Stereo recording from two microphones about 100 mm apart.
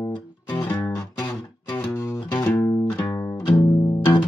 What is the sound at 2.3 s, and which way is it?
Music, 20° left (ahead or behind).